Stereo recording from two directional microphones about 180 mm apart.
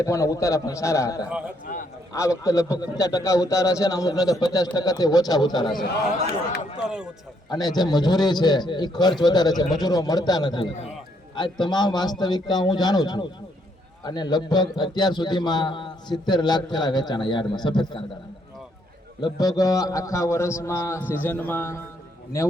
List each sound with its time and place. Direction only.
0.0 s a man's voice: 15° left (ahead or behind)
1.7 s speech: 45° left (ahead or behind)
2.1 s a man's voice: 15° left (ahead or behind)
6.8 s speech: 5° right (ahead or behind)
7.5 s a man's voice: 20° left (ahead or behind)
19.2 s a man's voice: 20° left (ahead or behind)